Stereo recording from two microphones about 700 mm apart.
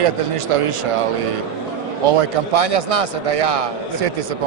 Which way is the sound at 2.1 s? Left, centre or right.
Right.